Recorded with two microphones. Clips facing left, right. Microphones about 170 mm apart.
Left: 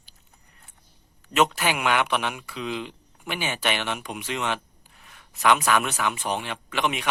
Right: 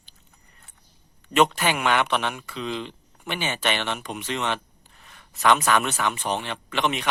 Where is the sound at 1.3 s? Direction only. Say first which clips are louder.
Right 2 dB; 5° left (ahead or behind).